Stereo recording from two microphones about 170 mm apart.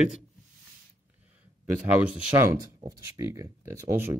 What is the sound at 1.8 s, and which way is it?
Speech, 10° right (ahead or behind).